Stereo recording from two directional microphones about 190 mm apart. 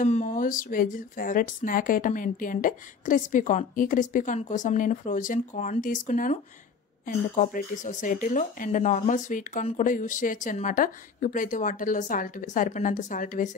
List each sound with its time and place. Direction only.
0.0 s speech: 40° left (ahead or behind)